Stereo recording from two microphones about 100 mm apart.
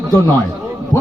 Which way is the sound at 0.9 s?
40° left (ahead or behind).